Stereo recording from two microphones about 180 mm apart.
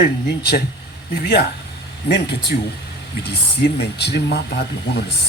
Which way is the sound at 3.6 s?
65° left (ahead or behind).